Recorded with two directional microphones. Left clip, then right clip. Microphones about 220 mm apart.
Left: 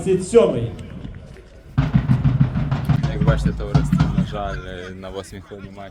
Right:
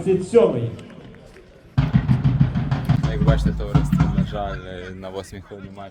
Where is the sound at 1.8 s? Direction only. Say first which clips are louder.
Left 1 dB; 45° right (ahead or behind).